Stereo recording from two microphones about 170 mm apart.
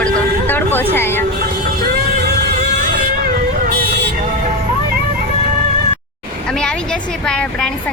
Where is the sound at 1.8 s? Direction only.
65° right (ahead or behind).